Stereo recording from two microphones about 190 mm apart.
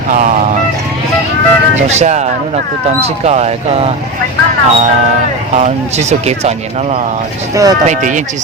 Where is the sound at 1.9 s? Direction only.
35° right (ahead or behind).